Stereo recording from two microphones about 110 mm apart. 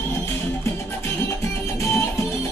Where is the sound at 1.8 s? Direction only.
25° left (ahead or behind).